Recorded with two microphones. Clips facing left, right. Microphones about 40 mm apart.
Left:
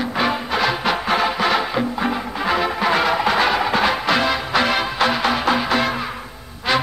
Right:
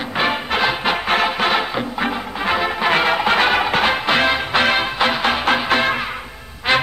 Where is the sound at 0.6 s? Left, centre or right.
Right.